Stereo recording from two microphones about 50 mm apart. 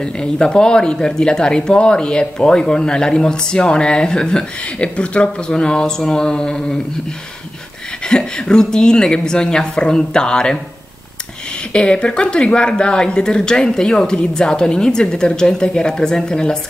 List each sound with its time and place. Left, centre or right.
0.0 s speech: centre
8.1 s speech: centre
11.7 s speech: centre